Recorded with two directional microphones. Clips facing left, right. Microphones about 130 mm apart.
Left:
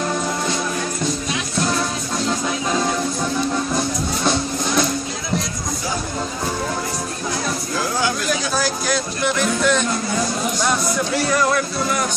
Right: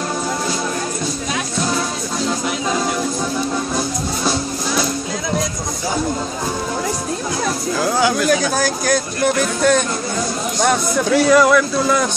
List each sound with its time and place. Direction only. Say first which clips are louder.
8.3 s a sound: right 5 dB; 50° right (ahead or behind)
10.6 s speech: right 7 dB; 55° right (ahead or behind)
11.2 s speech: right 7 dB; 90° right